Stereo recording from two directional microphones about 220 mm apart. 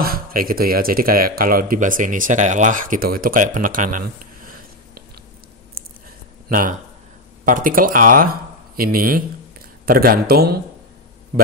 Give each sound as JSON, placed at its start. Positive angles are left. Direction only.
{"t": 0.0, "sound": "a man's voice", "side_deg": -40}
{"t": 7.4, "sound": "speech", "side_deg": -40}